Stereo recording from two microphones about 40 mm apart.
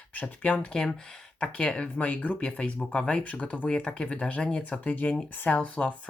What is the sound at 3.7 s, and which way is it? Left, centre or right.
Speech, left.